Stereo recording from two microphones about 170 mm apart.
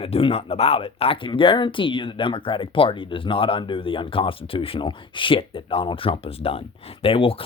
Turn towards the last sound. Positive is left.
turn(degrees=30)  # may be behind; listen again after turning